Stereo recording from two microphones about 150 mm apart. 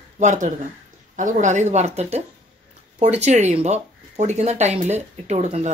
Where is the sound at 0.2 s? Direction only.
55° right (ahead or behind).